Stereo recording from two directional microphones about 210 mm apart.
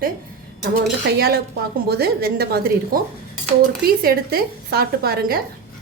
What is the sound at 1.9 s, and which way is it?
A woman's voice, 50° right (ahead or behind).